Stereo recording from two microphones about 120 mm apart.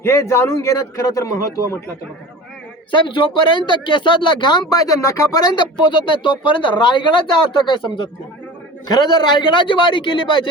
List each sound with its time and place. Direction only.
0.0 s a man's voice: 20° left (ahead or behind)
2.9 s speech: 45° left (ahead or behind)
4.7 s a man's voice: 30° left (ahead or behind)
6.1 s speech: 45° left (ahead or behind)